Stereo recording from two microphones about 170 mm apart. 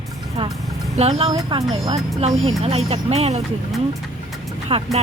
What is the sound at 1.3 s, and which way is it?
Speech, 25° right (ahead or behind).